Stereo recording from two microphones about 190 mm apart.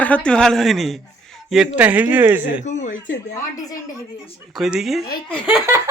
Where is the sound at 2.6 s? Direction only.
40° left (ahead or behind).